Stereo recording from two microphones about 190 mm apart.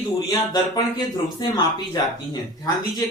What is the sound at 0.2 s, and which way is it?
Speech, 15° left (ahead or behind).